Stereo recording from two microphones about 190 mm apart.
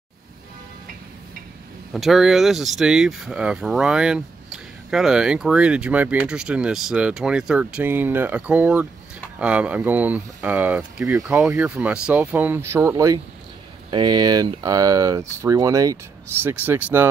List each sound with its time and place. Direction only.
2.0 s speech: centre (ahead or behind)